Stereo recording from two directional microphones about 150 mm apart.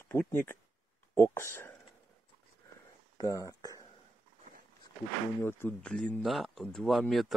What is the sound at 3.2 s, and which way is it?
Speech, 25° left (ahead or behind).